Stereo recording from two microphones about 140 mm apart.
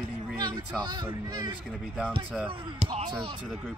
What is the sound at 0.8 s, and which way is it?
Speech, 30° right (ahead or behind).